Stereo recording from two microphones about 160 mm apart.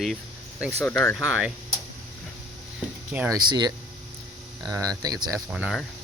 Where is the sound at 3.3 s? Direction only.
25° right (ahead or behind).